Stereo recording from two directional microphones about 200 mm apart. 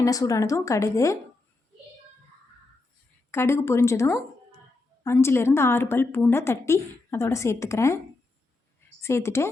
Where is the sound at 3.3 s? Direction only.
10° left (ahead or behind).